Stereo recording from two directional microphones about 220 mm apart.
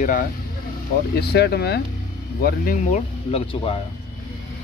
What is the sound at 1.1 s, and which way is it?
Speech, 45° left (ahead or behind).